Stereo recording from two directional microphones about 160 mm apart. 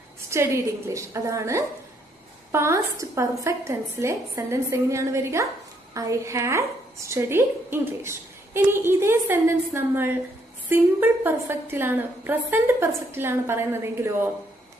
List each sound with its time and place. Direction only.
0.3 s a woman's voice: 15° right (ahead or behind)